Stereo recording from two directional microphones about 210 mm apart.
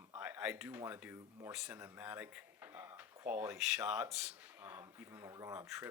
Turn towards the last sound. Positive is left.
turn(degrees=-5)  # may be behind; listen again after turning